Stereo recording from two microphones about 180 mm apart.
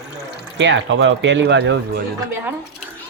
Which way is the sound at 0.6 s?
90° right.